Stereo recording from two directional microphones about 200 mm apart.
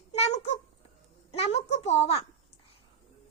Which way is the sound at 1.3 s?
30° left (ahead or behind).